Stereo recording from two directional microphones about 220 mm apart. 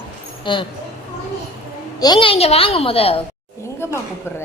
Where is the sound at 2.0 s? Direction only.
20° left (ahead or behind).